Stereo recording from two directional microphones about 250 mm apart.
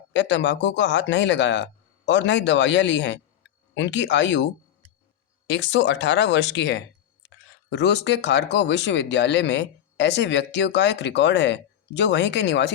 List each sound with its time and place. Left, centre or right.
0.1 s speech: left
5.5 s speech: left